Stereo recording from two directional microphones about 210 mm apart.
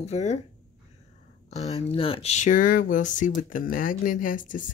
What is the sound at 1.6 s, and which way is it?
Speech, 30° left (ahead or behind).